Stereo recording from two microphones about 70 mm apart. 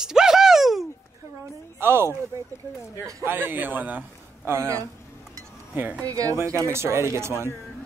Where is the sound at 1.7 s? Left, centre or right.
Right.